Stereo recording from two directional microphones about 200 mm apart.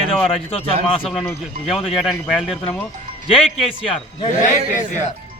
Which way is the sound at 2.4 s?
5° left (ahead or behind).